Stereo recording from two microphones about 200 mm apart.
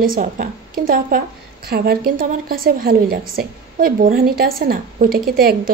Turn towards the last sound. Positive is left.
turn(degrees=-50)  # may be behind; listen again after turning